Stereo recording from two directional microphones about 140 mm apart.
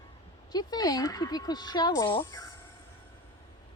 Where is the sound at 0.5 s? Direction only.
30° left (ahead or behind).